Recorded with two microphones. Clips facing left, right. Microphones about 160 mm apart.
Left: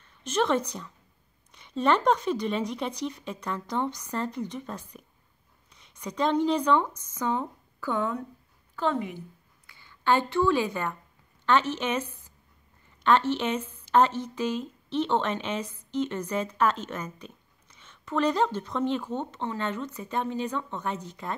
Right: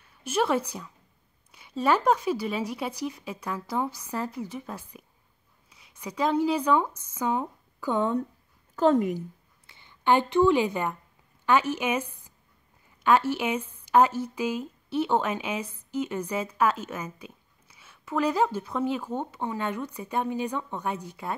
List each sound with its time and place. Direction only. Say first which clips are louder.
0.0 s a woman's voice: even; 10° right (ahead or behind)
7.9 s a woman's voice: right 3 dB; 25° right (ahead or behind)
8.7 s a woman's voice: right 7 dB; 40° right (ahead or behind)
9.7 s a woman's voice: right 2 dB; 20° right (ahead or behind)